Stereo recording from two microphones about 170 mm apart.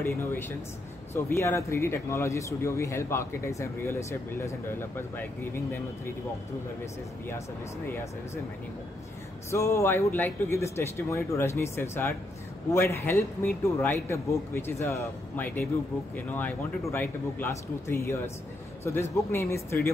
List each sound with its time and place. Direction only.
0.0 s speech: 15° left (ahead or behind)
7.2 s speech: 15° left (ahead or behind)
9.5 s speech: 15° left (ahead or behind)